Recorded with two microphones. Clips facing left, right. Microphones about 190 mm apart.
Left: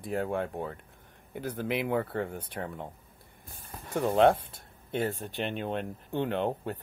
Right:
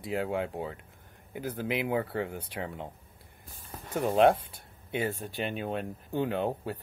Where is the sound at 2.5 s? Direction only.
15° right (ahead or behind).